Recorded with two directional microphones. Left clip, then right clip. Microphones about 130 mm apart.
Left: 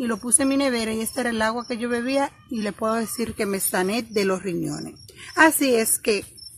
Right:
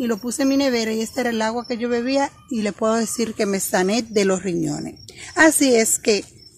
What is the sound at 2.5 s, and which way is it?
Speech, 35° right (ahead or behind).